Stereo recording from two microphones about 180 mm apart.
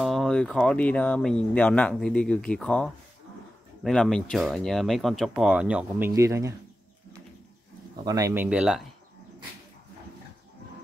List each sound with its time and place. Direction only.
0.0 s speech: centre (ahead or behind); by 6.5 s 15° right (ahead or behind)
8.0 s speech: 20° right (ahead or behind); by 8.8 s 5° right (ahead or behind)